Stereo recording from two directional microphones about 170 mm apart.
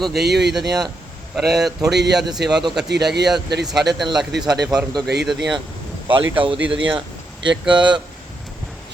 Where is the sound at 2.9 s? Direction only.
80° right.